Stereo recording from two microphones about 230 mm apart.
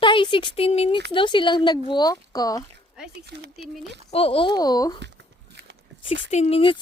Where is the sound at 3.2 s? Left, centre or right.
Right.